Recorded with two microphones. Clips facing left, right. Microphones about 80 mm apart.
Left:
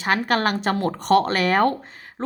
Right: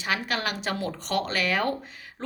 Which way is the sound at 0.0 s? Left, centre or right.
Left.